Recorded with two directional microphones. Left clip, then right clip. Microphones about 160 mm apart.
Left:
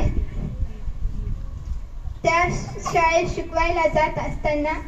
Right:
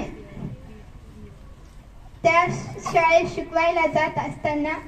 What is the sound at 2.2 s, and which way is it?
A woman's voice, 60° right (ahead or behind).